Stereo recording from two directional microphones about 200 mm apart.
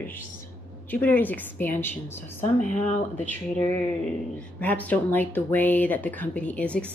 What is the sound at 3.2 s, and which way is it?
Speech, 10° left (ahead or behind).